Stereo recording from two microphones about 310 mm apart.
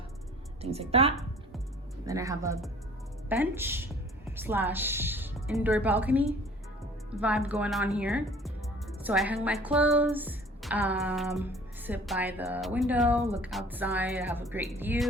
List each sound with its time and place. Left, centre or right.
0.6 s a woman's voice: centre